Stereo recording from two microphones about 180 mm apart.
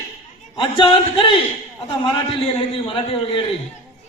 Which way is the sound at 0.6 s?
25° left (ahead or behind).